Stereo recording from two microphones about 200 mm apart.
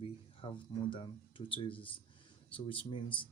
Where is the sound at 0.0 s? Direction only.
25° left (ahead or behind).